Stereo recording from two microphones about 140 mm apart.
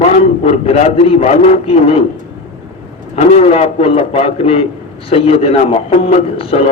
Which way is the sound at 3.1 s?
50° left (ahead or behind).